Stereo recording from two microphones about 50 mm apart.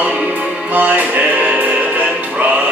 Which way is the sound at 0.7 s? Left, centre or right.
Right.